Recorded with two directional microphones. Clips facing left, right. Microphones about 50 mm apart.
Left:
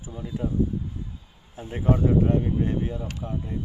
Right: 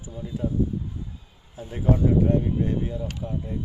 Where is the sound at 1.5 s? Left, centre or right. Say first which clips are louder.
Even; left.